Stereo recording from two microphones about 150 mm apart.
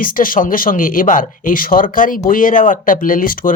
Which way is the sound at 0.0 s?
65° left (ahead or behind).